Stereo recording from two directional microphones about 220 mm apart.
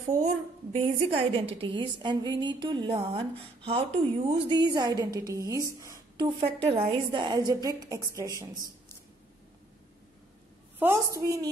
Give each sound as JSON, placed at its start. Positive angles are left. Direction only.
{"t": 0.0, "sound": "a woman's voice", "side_deg": -30}
{"t": 10.8, "sound": "a woman's voice", "side_deg": -15}